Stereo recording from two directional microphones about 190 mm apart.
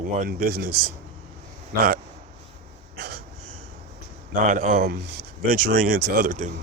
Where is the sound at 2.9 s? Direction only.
60° right (ahead or behind).